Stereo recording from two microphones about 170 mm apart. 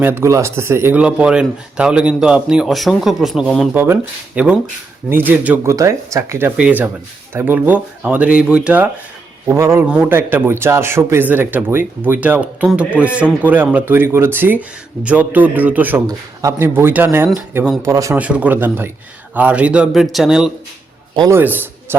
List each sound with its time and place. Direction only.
0.0 s a man's voice: 15° right (ahead or behind)
18.2 s a man's voice: 10° right (ahead or behind)
21.2 s a man's voice: 15° right (ahead or behind)